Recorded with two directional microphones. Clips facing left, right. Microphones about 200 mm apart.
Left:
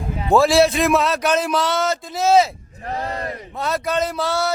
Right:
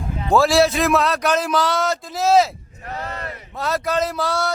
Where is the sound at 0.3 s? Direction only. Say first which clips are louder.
Left 1 dB; centre (ahead or behind).